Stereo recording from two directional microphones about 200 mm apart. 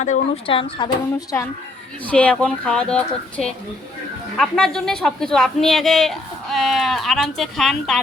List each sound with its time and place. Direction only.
0.0 s speech: 30° left (ahead or behind)
2.0 s speech: 5° left (ahead or behind)